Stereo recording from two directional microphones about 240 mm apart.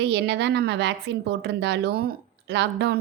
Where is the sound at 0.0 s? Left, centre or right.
Right.